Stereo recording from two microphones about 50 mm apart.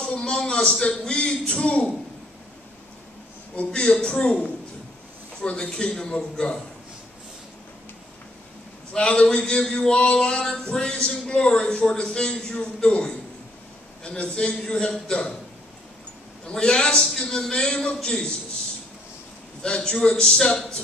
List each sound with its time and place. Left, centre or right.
0.0 s a man's voice: centre
3.8 s a man's voice: centre
4.1 s a man's voice: left
8.9 s a man's voice: left
16.5 s a man's voice: centre
19.6 s a man's voice: centre